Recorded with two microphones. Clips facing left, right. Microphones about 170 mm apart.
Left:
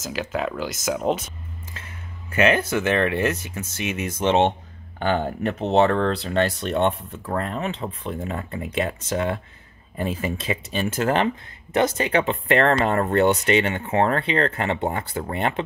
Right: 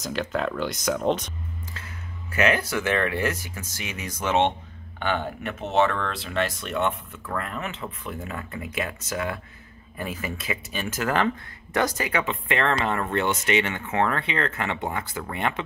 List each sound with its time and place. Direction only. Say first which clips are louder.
0.0 s speech: even; 5° left (ahead or behind)
2.3 s speech: left 4 dB; 25° left (ahead or behind)